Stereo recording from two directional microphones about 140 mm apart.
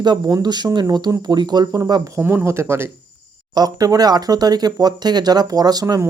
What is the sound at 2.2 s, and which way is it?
Speech, 15° right (ahead or behind).